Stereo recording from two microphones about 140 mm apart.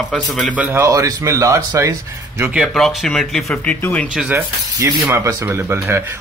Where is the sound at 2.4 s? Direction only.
Centre (ahead or behind).